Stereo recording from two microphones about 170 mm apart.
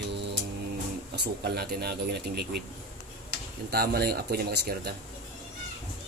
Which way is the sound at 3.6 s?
65° right (ahead or behind).